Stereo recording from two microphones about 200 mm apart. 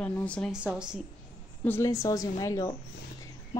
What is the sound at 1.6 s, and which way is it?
A woman's voice, 10° left (ahead or behind).